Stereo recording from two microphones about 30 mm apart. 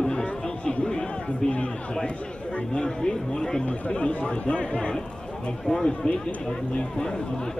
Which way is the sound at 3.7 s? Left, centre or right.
Left.